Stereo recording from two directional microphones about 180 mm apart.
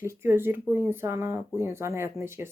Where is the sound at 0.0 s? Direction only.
15° right (ahead or behind).